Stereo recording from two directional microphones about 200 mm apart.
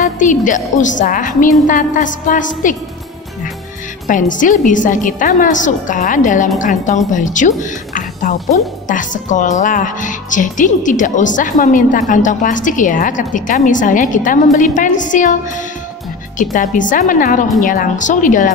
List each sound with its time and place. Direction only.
0.0 s a woman's voice: 40° left (ahead or behind)
4.1 s a woman's voice: 40° left (ahead or behind)